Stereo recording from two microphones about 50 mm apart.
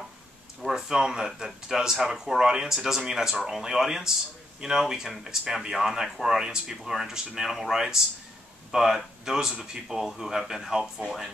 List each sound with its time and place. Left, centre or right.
0.7 s speech: centre
11.1 s speech: centre